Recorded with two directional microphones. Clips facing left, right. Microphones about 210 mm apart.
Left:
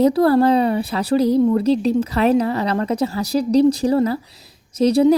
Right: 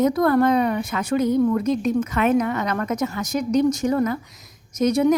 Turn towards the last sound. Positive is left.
turn(degrees=30)  # may be behind; listen again after turning